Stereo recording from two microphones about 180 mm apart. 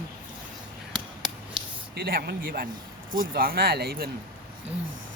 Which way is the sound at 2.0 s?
60° right (ahead or behind).